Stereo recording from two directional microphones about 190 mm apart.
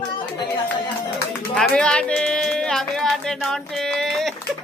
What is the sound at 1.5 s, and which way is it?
Music, 5° left (ahead or behind).